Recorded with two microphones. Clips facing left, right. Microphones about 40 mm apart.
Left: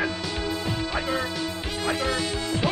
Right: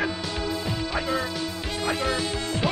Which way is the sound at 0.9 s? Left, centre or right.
Centre.